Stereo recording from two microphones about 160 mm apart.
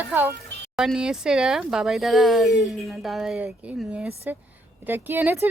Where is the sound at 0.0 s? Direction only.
10° right (ahead or behind).